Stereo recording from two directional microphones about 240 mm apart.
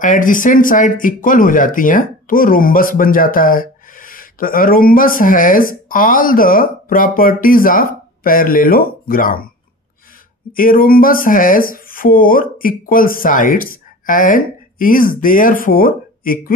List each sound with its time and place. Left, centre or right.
0.0 s speech: left
10.5 s speech: left